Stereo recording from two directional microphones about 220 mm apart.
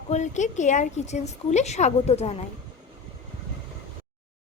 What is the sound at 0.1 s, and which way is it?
A woman's voice, 35° left (ahead or behind).